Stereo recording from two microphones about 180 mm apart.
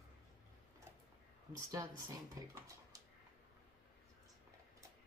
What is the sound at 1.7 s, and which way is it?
Speech, 20° right (ahead or behind).